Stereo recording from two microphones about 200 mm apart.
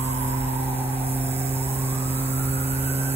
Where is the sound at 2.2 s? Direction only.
30° right (ahead or behind).